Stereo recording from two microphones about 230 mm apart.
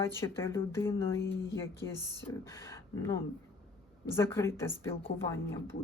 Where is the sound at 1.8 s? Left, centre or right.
Left.